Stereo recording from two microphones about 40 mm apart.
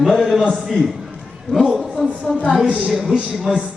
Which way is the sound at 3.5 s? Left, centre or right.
Centre.